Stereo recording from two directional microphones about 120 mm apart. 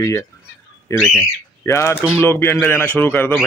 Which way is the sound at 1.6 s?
20° left (ahead or behind).